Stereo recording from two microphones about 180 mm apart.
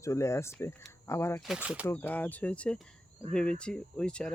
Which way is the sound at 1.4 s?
5° right (ahead or behind).